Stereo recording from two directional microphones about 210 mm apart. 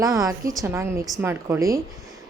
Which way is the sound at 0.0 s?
15° right (ahead or behind).